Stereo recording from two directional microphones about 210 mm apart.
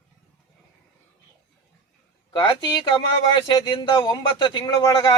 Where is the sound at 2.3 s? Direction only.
20° left (ahead or behind).